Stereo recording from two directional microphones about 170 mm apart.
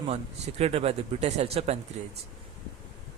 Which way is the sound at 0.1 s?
40° right (ahead or behind).